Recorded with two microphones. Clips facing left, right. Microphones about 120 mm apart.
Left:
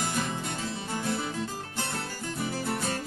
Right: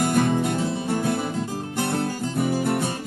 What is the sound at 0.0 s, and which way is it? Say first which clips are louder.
Music: right 11 dB; 55° right (ahead or behind).